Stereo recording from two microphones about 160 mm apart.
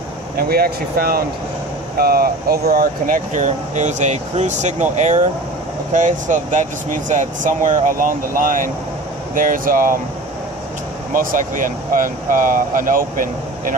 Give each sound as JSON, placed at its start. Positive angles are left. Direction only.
{"t": 0.4, "sound": "speech", "side_deg": -75}
{"t": 11.1, "sound": "speech", "side_deg": -55}